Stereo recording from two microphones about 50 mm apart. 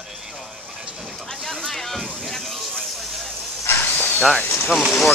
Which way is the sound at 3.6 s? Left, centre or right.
Left.